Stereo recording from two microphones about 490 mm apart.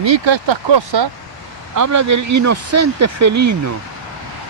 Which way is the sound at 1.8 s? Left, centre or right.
Right.